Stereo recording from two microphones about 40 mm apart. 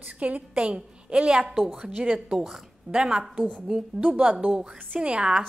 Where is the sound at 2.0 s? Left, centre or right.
Right.